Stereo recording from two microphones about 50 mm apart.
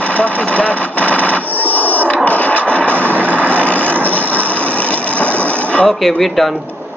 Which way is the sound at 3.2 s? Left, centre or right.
Right.